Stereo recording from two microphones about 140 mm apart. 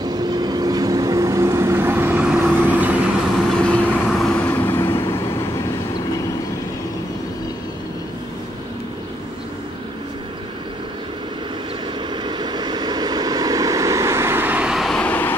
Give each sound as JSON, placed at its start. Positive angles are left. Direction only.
{"t": 0.0, "sound": "vehicle", "side_deg": -30}
{"t": 3.6, "sound": "vehicle", "side_deg": 5}
{"t": 12.2, "sound": "vehicle", "side_deg": -30}